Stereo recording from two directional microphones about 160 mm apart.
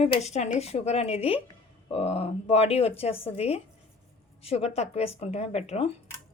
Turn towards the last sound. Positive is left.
turn(degrees=40)  # may be behind; listen again after turning